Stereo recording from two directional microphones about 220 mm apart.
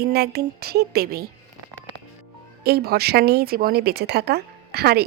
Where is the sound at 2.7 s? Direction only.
45° right (ahead or behind).